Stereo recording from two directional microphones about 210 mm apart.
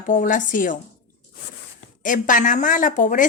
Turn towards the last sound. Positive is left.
turn(degrees=40)  # may be behind; listen again after turning